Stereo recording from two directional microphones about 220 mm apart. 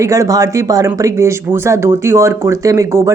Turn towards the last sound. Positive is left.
turn(degrees=-15)  # may be behind; listen again after turning